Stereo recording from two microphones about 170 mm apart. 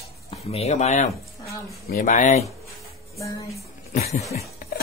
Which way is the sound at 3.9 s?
40° left (ahead or behind).